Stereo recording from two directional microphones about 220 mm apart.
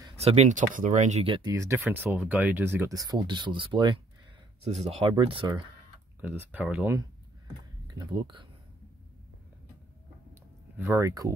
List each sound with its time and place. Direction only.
0.2 s speech: 30° right (ahead or behind)
6.2 s speech: 5° right (ahead or behind)
7.9 s speech: 20° right (ahead or behind)
10.8 s speech: 15° right (ahead or behind)